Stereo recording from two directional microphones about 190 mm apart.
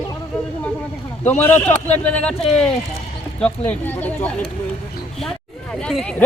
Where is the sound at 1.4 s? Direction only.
10° left (ahead or behind).